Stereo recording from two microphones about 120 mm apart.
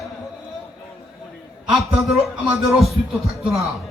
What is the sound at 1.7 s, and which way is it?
Music, centre (ahead or behind).